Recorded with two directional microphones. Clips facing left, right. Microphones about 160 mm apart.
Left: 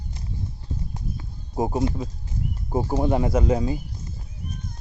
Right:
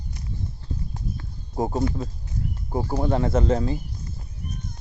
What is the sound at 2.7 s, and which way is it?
Speech, 20° left (ahead or behind).